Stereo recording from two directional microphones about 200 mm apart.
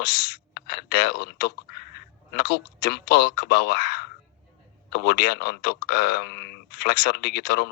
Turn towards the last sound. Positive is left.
turn(degrees=55)  # may be behind; listen again after turning